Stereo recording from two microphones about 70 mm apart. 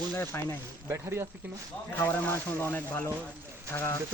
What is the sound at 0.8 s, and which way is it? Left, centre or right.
Speech, right.